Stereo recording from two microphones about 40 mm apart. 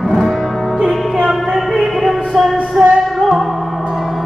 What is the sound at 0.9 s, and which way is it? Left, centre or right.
Music, centre.